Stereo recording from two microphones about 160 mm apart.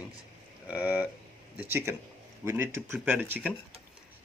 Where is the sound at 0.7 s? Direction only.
10° right (ahead or behind).